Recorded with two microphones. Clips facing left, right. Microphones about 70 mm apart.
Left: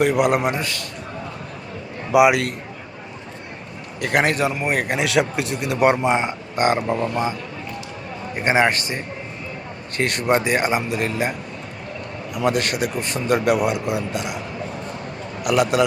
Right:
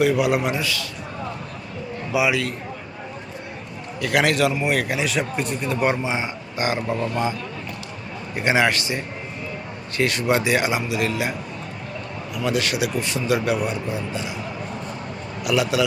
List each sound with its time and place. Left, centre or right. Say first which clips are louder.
0.2 s a man's voice: left 2 dB; left
2.1 s speech: left 6 dB; left
4.0 s a man's voice: even; left
4.9 s speech: left 4 dB; left
5.8 s speech: left 7 dB; left
8.4 s a man's voice: left 1 dB; left
10.0 s a man's voice: left 1 dB; left
12.3 s a man's voice: left 2 dB; left
15.4 s a man's voice: left 3 dB; left